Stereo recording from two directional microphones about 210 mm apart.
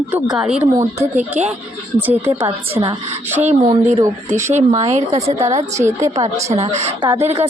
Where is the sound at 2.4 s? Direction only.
25° right (ahead or behind).